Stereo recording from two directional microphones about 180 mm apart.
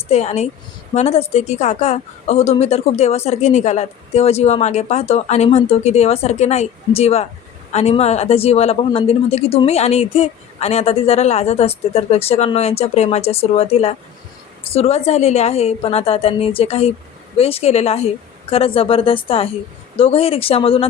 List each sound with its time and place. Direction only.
0.1 s a woman's voice: 35° left (ahead or behind)